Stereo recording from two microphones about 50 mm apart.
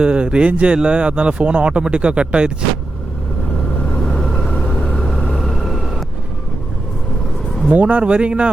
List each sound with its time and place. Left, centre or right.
0.0 s speech: right
4.0 s vehicle: centre
4.9 s vehicle: left
5.4 s vehicle: centre
7.7 s speech: right